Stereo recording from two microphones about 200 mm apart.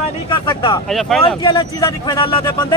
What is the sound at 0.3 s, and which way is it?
Speech, 25° left (ahead or behind).